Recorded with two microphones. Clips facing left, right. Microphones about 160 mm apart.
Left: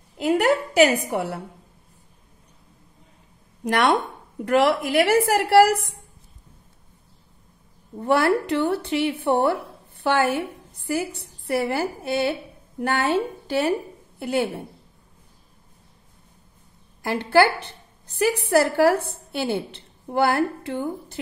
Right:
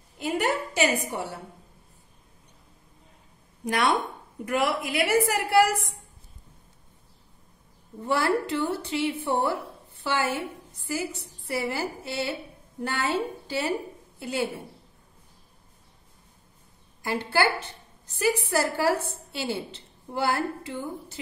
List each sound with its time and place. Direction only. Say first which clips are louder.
0.2 s a woman's voice: left 7 dB; 75° left (ahead or behind)
3.6 s a woman's voice: left 4 dB; 75° left (ahead or behind)
8.0 s a woman's voice: left 5 dB; 65° left (ahead or behind)
17.0 s a woman's voice: left 7 dB; 60° left (ahead or behind)